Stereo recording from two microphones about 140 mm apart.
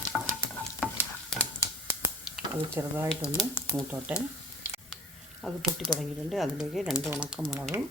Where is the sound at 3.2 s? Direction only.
20° left (ahead or behind).